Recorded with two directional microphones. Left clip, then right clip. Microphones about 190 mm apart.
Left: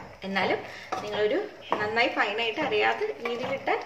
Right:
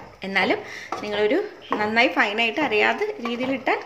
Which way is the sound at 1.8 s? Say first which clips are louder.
Right 6 dB; 50° right (ahead or behind).